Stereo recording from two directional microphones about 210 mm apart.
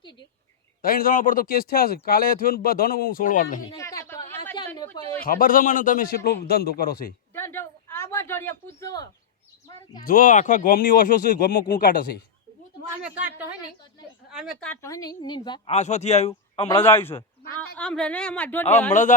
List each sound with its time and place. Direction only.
0.8 s speech: 45° left (ahead or behind)
3.8 s a sound: 15° left (ahead or behind)
5.2 s speech: 40° left (ahead or behind)
7.3 s a sound: 10° left (ahead or behind)
8.8 s bird: 15° left (ahead or behind)
10.0 s speech: 40° left (ahead or behind)
13.0 s a sound: 5° right (ahead or behind)
14.3 s a woman's voice: centre (ahead or behind); by 16.6 s 30° left (ahead or behind)
16.8 s a man's voice: 10° left (ahead or behind)
18.9 s speech: 35° left (ahead or behind)